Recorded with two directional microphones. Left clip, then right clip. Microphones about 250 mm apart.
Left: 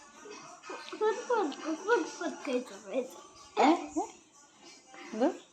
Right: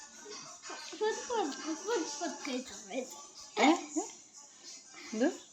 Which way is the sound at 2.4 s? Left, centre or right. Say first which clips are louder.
Left 5 dB; centre.